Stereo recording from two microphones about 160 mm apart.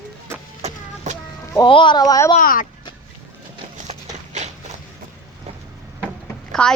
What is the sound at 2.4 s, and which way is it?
Speech, 60° left (ahead or behind).